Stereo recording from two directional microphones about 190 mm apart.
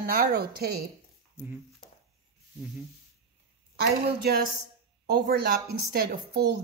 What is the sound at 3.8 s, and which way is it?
A woman's voice, 55° right (ahead or behind).